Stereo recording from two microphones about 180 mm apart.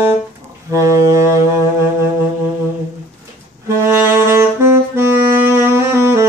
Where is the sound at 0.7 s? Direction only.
15° right (ahead or behind).